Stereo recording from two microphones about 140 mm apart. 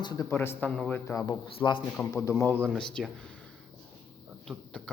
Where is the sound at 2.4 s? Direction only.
15° left (ahead or behind).